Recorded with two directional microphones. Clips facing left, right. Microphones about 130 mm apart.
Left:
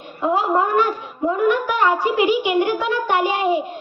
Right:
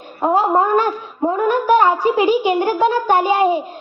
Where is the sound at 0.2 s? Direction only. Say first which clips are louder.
Right 3 dB; 40° right (ahead or behind).